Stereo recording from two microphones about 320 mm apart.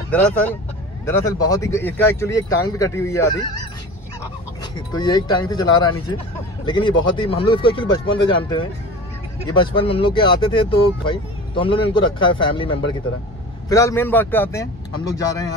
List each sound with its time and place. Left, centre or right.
0.1 s speech: centre
4.7 s speech: centre